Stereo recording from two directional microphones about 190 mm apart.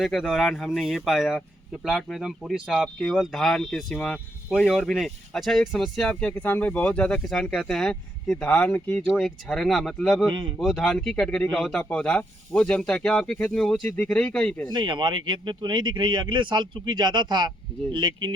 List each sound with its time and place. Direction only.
0.0 s speech: centre (ahead or behind)
14.7 s speech: 25° right (ahead or behind)